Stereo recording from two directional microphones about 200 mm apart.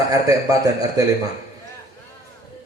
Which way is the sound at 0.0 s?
15° right (ahead or behind).